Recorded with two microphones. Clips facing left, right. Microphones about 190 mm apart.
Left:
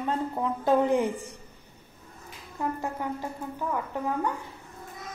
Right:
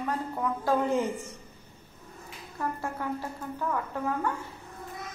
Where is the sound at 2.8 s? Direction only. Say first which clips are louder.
Left 1 dB; 15° left (ahead or behind).